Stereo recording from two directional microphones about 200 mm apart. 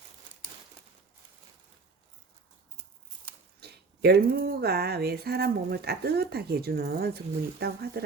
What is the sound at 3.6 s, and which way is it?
Speech, 55° right (ahead or behind).